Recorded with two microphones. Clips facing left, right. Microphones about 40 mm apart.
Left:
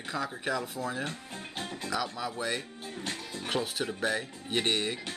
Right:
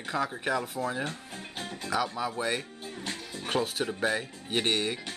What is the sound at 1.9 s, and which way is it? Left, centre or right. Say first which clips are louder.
Speech: right 4 dB; centre.